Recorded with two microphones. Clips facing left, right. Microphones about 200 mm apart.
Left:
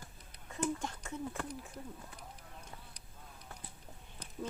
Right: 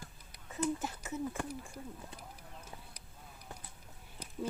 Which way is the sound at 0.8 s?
5° right (ahead or behind).